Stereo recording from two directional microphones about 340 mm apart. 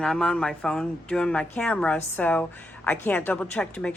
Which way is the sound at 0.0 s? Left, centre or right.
Centre.